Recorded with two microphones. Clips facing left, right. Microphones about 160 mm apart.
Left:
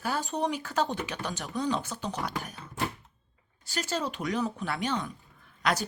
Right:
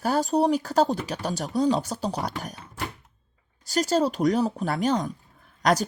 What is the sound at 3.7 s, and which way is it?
Speech, 40° right (ahead or behind).